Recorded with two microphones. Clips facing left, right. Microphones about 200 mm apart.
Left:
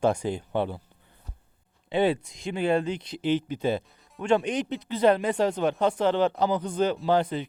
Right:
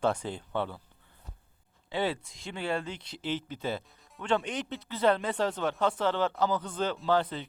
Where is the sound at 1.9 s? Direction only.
20° left (ahead or behind).